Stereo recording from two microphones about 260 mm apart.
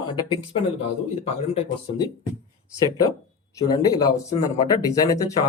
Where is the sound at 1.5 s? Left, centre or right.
Left.